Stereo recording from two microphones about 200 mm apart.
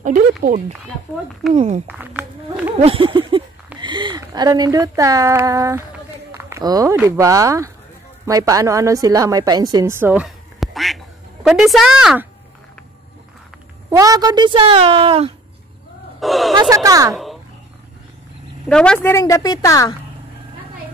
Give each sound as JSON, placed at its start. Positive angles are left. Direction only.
{"t": 0.0, "sound": "speech", "side_deg": -40}
{"t": 1.9, "sound": "a sound", "side_deg": -5}
{"t": 2.8, "sound": "a woman's voice", "side_deg": -25}
{"t": 13.8, "sound": "a woman's voice", "side_deg": -20}
{"t": 16.2, "sound": "a woman's voice", "side_deg": 0}
{"t": 16.5, "sound": "speech", "side_deg": -20}
{"t": 18.7, "sound": "a woman's voice", "side_deg": 5}